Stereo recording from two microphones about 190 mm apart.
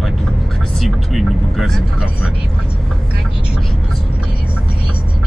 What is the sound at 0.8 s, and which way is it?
Speech, centre (ahead or behind).